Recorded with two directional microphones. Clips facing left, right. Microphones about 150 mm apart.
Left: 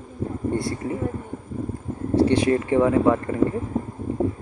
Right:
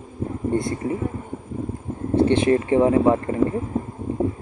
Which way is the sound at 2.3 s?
25° right (ahead or behind).